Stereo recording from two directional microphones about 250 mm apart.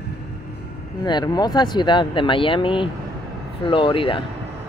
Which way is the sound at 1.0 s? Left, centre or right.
Centre.